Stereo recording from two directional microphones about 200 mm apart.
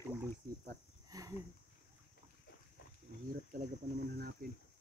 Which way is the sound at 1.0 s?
15° right (ahead or behind).